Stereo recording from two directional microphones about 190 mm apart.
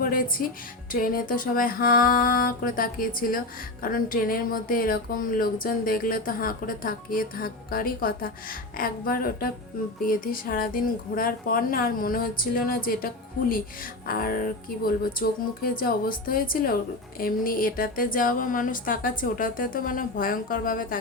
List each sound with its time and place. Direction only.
0.0 s speech: 50° left (ahead or behind)
14.1 s speech: 50° left (ahead or behind)